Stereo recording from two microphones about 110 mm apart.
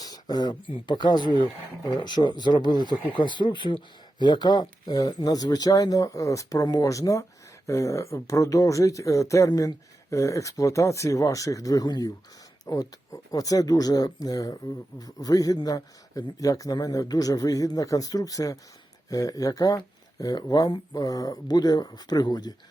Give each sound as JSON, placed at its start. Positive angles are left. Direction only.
{"t": 0.0, "sound": "speech", "side_deg": 35}